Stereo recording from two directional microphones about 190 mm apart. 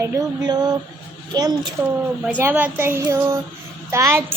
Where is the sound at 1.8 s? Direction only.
10° right (ahead or behind).